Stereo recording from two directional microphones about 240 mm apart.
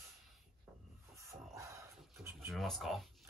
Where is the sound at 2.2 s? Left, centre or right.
Centre.